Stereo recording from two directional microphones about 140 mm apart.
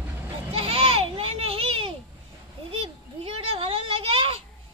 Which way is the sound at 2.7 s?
45° right (ahead or behind).